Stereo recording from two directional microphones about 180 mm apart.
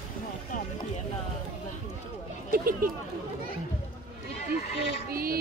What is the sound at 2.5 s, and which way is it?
Speech, 50° right (ahead or behind).